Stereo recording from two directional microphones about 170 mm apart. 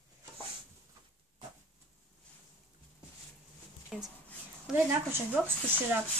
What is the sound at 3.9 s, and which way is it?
Speech, centre (ahead or behind).